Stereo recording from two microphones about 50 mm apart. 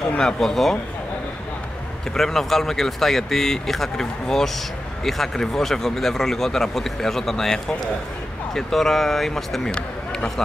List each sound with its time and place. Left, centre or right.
0.2 s speech: centre
2.1 s speech: centre
9.7 s a sound: centre